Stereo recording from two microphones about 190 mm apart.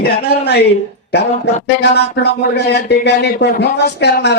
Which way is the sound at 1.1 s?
60° left (ahead or behind).